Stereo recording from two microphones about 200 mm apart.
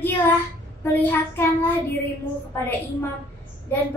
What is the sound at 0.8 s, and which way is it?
Child singing, 10° left (ahead or behind).